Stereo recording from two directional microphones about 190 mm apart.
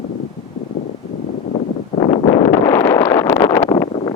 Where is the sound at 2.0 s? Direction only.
30° left (ahead or behind).